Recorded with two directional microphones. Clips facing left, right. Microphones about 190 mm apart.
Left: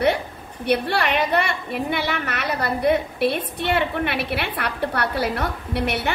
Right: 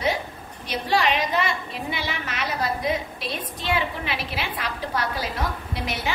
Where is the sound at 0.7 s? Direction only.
65° left (ahead or behind).